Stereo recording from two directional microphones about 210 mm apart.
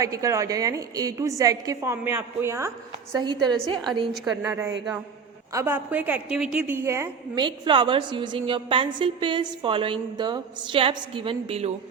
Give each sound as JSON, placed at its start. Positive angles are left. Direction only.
{"t": 0.0, "sound": "a woman's voice", "side_deg": -15}
{"t": 4.1, "sound": "a woman's voice", "side_deg": -5}